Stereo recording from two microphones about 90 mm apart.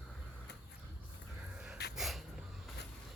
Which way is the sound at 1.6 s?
5° right (ahead or behind).